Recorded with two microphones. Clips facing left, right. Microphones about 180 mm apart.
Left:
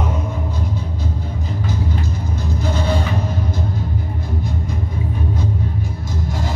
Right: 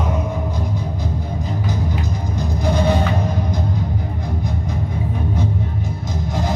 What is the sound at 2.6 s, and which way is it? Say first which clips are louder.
Music: right 4 dB; 15° right (ahead or behind).